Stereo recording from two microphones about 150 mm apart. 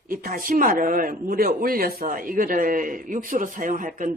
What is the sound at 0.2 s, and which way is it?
Speech, 70° right (ahead or behind).